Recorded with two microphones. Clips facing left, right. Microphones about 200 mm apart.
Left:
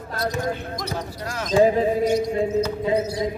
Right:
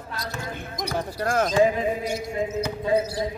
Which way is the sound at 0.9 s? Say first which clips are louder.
Right 6 dB; 50° right (ahead or behind).